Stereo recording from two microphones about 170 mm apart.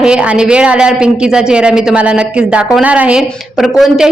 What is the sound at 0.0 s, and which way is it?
Speech, 5° right (ahead or behind).